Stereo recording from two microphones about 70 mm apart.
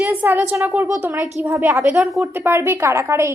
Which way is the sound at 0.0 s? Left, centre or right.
Right.